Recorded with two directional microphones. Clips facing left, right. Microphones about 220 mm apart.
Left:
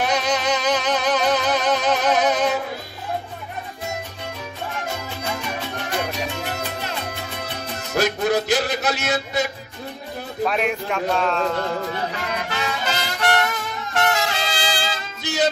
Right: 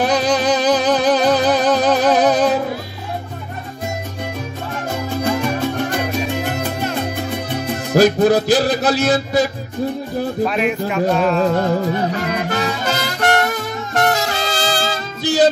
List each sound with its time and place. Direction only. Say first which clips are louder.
0.0 s music: right 6 dB; 35° right (ahead or behind)
4.8 s music: right 13 dB; 50° right (ahead or behind)
7.9 s music: right 8 dB; 35° right (ahead or behind)
10.4 s speech: right 2 dB; centre (ahead or behind)
12.4 s music: right 6 dB; 40° right (ahead or behind)